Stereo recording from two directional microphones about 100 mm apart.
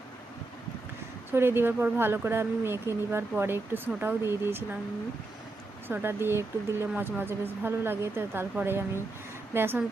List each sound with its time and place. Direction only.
1.3 s speech: 25° right (ahead or behind)
5.9 s speech: 20° right (ahead or behind)